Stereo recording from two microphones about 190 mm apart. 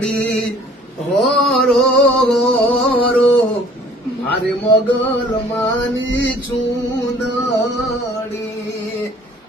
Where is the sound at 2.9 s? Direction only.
30° left (ahead or behind).